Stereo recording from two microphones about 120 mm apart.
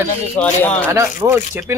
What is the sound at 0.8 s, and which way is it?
Speech, 20° right (ahead or behind).